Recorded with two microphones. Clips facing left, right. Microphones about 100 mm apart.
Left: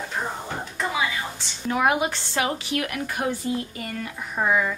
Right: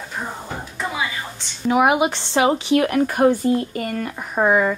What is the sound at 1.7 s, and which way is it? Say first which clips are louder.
A woman's voice: right 5 dB; 15° right (ahead or behind).